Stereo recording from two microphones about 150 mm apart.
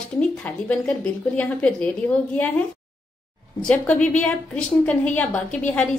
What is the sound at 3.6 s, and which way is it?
A woman's voice, 5° left (ahead or behind).